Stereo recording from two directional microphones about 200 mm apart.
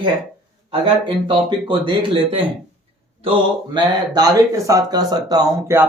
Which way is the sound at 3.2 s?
25° right (ahead or behind).